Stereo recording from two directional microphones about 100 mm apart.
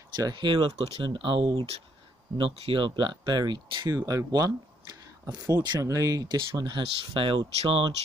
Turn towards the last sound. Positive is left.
turn(degrees=-65)  # may be behind; listen again after turning